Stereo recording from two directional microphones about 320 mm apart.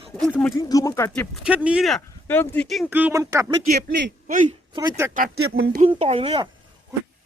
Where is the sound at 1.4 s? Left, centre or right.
Centre.